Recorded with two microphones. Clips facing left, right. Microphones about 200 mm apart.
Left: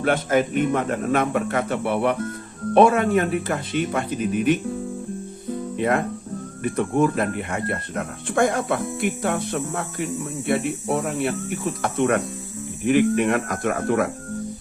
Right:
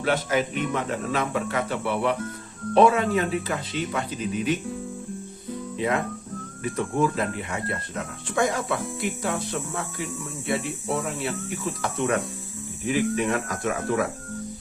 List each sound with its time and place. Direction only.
0.0 s speech: 50° left (ahead or behind)
5.7 s speech: 55° left (ahead or behind)